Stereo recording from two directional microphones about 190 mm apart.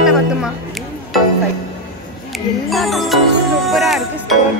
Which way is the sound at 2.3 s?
Centre (ahead or behind).